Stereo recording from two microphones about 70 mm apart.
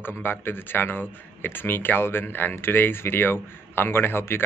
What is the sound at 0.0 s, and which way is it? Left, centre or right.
Speech, left.